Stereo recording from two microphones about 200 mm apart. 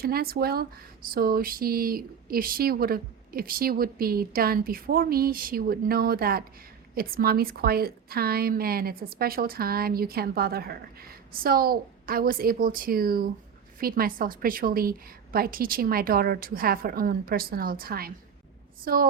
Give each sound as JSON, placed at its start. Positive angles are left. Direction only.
{"t": 0.0, "sound": "a woman's voice", "side_deg": -50}